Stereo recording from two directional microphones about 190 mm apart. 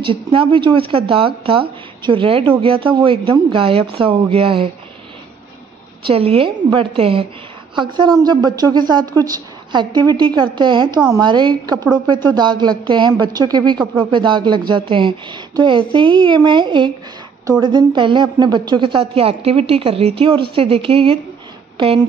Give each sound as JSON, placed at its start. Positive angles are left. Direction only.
{"t": 0.0, "sound": "a woman's voice", "side_deg": -25}
{"t": 6.0, "sound": "a woman's voice", "side_deg": -30}